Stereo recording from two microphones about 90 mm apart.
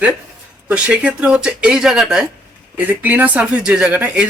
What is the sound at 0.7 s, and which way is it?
Speech, 15° right (ahead or behind).